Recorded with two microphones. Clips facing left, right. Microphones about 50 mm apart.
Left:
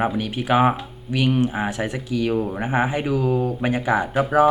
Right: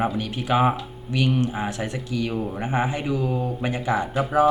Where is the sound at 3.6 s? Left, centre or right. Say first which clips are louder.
Left 2 dB; left.